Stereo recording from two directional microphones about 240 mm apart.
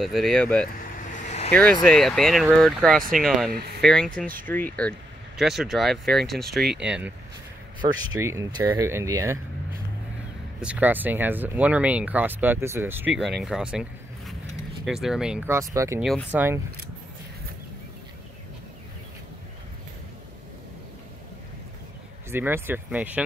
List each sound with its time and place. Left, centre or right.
0.0 s speech: centre
1.1 s vehicle: left
1.6 s speech: centre
7.8 s speech: centre
10.6 s speech: centre
16.0 s speech: centre
22.3 s speech: centre